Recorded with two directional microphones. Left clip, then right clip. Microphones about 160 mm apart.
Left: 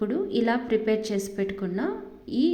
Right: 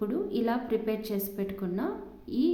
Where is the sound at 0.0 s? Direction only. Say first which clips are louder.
Left 4 dB; 15° left (ahead or behind).